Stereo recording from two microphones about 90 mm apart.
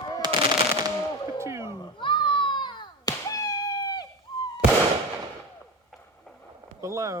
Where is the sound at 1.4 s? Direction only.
30° right (ahead or behind).